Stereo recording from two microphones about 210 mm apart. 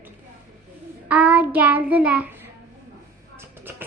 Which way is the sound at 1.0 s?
5° right (ahead or behind).